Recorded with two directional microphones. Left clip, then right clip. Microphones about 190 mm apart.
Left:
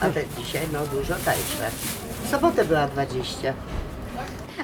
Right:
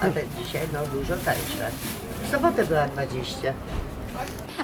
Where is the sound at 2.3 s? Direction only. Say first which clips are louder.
Left 1 dB; 50° left (ahead or behind).